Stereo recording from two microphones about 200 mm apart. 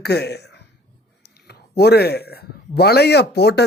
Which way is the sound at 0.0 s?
55° left (ahead or behind).